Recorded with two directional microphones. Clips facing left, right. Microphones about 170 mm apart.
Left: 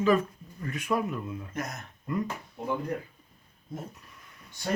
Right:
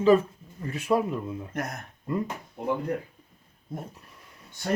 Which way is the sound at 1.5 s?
55° right (ahead or behind).